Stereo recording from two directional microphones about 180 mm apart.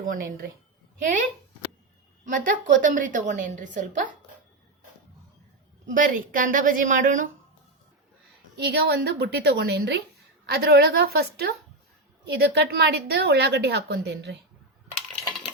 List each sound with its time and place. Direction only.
0.0 s a woman's voice: 50° right (ahead or behind)
2.2 s a woman's voice: 50° right (ahead or behind)
5.9 s a woman's voice: 50° right (ahead or behind)
8.5 s a woman's voice: 65° right (ahead or behind)